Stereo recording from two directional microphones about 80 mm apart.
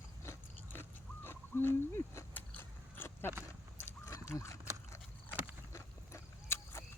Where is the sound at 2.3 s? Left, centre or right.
Left.